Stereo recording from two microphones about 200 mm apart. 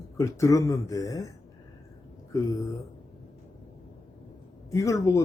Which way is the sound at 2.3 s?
15° left (ahead or behind).